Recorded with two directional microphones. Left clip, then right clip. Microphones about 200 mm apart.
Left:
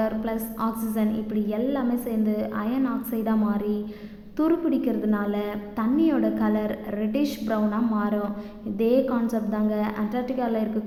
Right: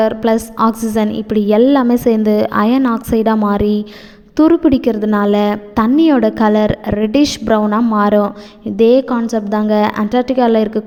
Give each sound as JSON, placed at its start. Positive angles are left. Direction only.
{"t": 0.0, "sound": "a woman's voice", "side_deg": -45}